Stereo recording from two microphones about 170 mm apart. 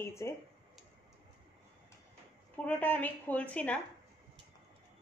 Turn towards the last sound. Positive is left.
turn(degrees=10)  # may be behind; listen again after turning